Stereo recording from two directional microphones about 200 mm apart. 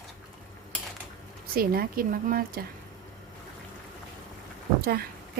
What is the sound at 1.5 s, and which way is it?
Speech, 45° right (ahead or behind).